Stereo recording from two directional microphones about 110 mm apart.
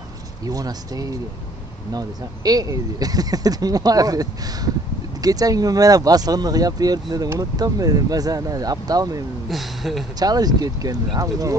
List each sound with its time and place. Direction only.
0.5 s speech: 35° right (ahead or behind)
9.5 s speech: centre (ahead or behind)
10.1 s speech: 35° right (ahead or behind)